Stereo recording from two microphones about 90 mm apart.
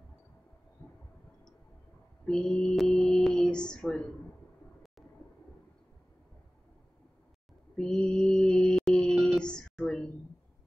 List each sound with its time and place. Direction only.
0.8 s heart murmur: 25° left (ahead or behind)
2.2 s a sound: 5° left (ahead or behind)
7.7 s music: 10° left (ahead or behind)